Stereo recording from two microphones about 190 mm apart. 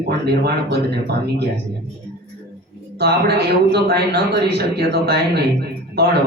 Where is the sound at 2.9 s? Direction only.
60° right (ahead or behind).